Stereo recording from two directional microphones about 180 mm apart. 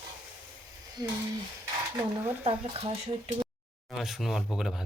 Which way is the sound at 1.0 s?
20° right (ahead or behind).